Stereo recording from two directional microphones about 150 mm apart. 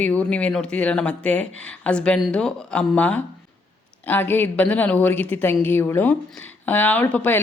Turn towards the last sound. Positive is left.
turn(degrees=10)  # may be behind; listen again after turning